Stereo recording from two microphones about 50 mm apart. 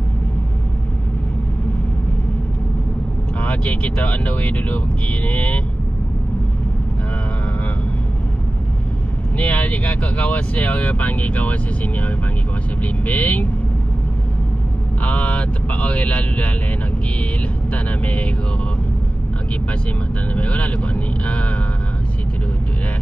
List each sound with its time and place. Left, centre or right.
3.3 s speech: left
9.4 s speech: left
15.0 s speech: left
17.8 s speech: left
20.3 s speech: left